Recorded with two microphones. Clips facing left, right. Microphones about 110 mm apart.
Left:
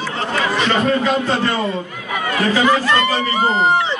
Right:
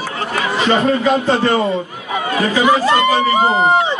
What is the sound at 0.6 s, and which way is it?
A man's voice, 20° right (ahead or behind).